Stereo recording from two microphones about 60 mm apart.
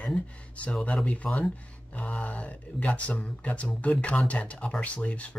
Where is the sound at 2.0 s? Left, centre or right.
Left.